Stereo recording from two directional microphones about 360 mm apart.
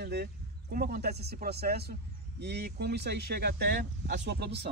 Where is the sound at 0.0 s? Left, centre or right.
Right.